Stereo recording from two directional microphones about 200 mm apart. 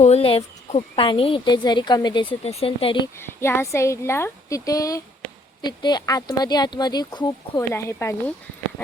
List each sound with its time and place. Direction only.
0.0 s a woman's voice: 30° left (ahead or behind)
3.2 s a woman's voice: 10° left (ahead or behind)